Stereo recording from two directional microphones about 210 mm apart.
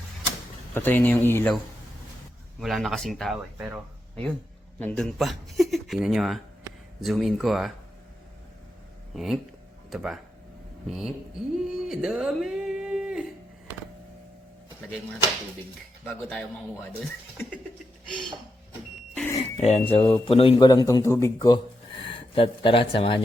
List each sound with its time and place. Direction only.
0.7 s a man's voice: 10° left (ahead or behind)
2.6 s speech: centre (ahead or behind)
4.8 s speech: 5° left (ahead or behind)
9.1 s speech: centre (ahead or behind)
10.8 s a sound: centre (ahead or behind)
16.0 s a man's voice: 5° left (ahead or behind)
19.4 s a sound: 30° left (ahead or behind)
19.9 s a man's voice: 25° left (ahead or behind)